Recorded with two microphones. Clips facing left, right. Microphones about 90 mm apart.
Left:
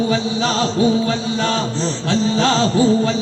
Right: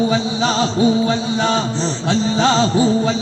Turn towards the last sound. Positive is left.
turn(degrees=-20)  # may be behind; listen again after turning